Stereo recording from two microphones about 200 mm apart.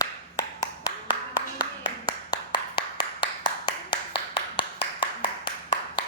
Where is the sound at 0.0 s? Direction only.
15° left (ahead or behind).